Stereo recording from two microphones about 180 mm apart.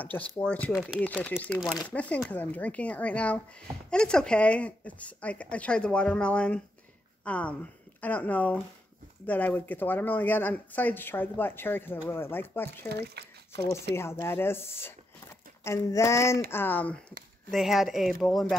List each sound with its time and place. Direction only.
0.0 s speech: 10° left (ahead or behind)
12.8 s speech: 65° right (ahead or behind)
13.9 s speech: 15° left (ahead or behind)